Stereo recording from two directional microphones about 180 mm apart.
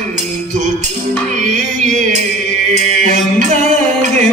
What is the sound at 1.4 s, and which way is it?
Music, 45° right (ahead or behind).